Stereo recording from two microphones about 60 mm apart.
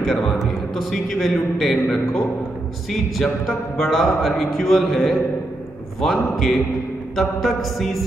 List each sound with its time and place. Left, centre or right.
0.0 s a man's voice: centre